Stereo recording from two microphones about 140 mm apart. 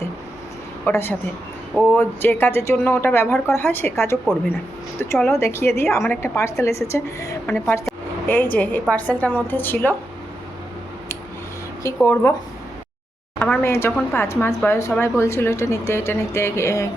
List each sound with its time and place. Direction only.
0.9 s a woman's voice: 15° left (ahead or behind)
7.4 s a woman's voice: 10° left (ahead or behind)
12.0 s a woman's voice: 15° left (ahead or behind)
13.4 s a woman's voice: 15° left (ahead or behind)